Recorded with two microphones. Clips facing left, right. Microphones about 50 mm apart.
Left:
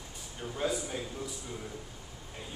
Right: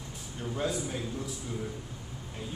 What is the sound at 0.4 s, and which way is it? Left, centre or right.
Speech, centre.